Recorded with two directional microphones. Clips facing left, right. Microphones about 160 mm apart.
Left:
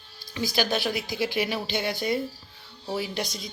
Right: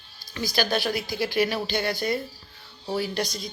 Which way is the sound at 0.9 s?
Centre (ahead or behind).